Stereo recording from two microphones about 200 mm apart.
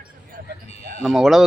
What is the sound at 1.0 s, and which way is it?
Speech, centre (ahead or behind).